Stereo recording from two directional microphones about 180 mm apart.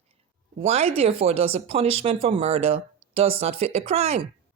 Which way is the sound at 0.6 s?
35° right (ahead or behind).